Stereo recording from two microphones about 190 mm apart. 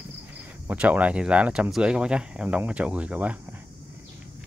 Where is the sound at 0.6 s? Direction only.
10° right (ahead or behind).